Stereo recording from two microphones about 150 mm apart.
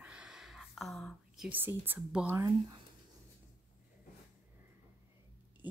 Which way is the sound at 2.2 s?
20° right (ahead or behind).